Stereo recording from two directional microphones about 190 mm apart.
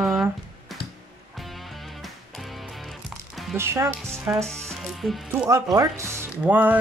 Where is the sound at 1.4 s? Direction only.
Centre (ahead or behind).